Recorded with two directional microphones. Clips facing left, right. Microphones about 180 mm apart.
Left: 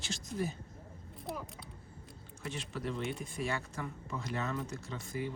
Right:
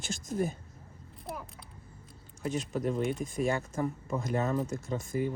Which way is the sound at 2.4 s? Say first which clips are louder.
Right 8 dB; 45° right (ahead or behind).